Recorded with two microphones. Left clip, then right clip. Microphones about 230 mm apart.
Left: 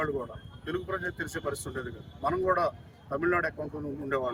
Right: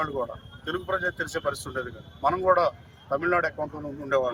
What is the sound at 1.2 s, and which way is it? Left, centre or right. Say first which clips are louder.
Speech: right 5 dB; left.